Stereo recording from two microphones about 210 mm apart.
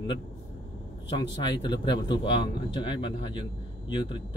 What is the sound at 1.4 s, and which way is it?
Speech, 20° left (ahead or behind).